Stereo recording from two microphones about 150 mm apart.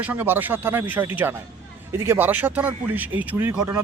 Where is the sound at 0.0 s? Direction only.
10° right (ahead or behind).